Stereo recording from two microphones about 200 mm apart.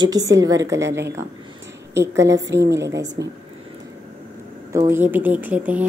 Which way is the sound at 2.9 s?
15° right (ahead or behind).